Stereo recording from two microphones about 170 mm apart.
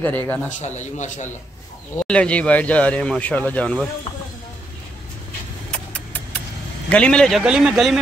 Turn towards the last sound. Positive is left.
turn(degrees=-5)  # may be behind; listen again after turning